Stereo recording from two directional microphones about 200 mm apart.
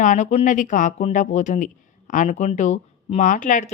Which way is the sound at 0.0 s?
40° left (ahead or behind).